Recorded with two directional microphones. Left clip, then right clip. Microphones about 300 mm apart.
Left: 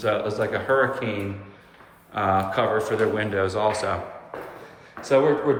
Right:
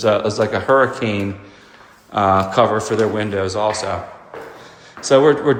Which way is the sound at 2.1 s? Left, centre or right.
Centre.